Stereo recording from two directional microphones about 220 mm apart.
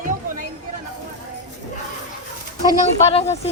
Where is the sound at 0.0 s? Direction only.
35° right (ahead or behind).